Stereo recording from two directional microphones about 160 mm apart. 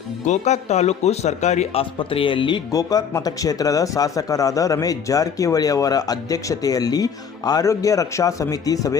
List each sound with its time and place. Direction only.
0.3 s speech: 45° left (ahead or behind); by 9.0 s 20° left (ahead or behind)